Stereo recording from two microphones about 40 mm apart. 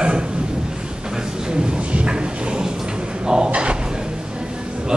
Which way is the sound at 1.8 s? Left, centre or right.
Right.